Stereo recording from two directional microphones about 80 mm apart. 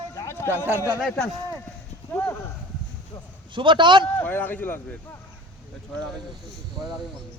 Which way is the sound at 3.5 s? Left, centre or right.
Right.